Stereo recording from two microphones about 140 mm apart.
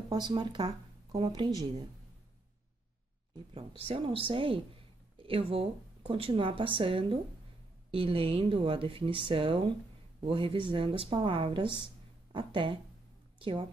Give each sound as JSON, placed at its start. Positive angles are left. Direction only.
{"t": 0.1, "sound": "speech", "side_deg": -30}
{"t": 3.8, "sound": "a woman's voice", "side_deg": -40}